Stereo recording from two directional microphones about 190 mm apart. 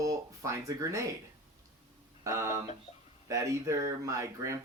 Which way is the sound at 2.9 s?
35° left (ahead or behind).